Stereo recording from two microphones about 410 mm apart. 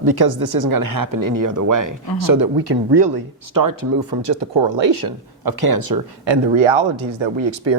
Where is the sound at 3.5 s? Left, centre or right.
Right.